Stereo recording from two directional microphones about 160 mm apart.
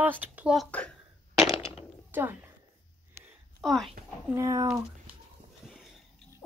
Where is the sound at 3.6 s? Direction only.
Centre (ahead or behind).